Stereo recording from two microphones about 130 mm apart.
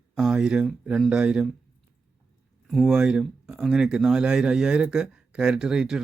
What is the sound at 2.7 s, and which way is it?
Speech, centre (ahead or behind).